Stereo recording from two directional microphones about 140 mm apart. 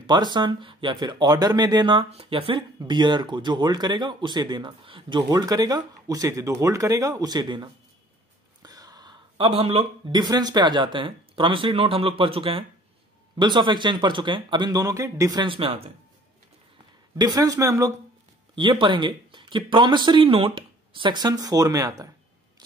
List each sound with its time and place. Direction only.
0.0 s a man's voice: 30° right (ahead or behind)
15.4 s speech: 40° right (ahead or behind)
17.2 s a man's voice: 25° right (ahead or behind)
18.5 s speech: 35° right (ahead or behind)